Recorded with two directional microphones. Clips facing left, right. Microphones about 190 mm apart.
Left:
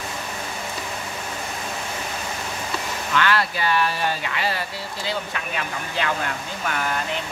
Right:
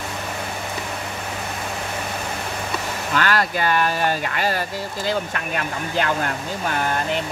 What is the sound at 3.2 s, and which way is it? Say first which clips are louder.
Speech: right 1 dB; 45° right (ahead or behind).